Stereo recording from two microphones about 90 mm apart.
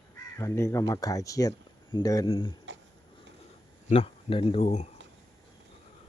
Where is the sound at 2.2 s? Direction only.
75° left (ahead or behind).